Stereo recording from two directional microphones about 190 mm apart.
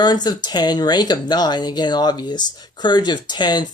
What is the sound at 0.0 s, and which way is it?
Speech, 20° left (ahead or behind).